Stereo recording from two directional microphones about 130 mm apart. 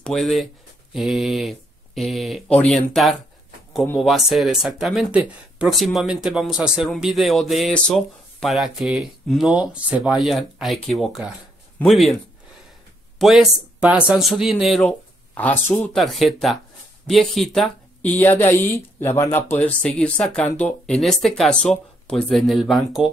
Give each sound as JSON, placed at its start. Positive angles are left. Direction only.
{"t": 0.0, "sound": "a man's voice", "side_deg": 0}
{"t": 13.2, "sound": "a man's voice", "side_deg": 0}
{"t": 15.3, "sound": "a man's voice", "side_deg": 10}